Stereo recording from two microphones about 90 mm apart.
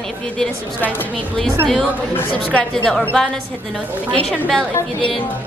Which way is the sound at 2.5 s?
5° left (ahead or behind).